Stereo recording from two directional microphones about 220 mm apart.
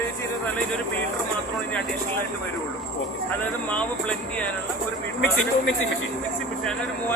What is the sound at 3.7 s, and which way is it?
Speech, 5° left (ahead or behind).